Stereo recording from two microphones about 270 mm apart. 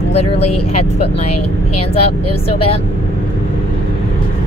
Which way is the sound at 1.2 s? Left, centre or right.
Left.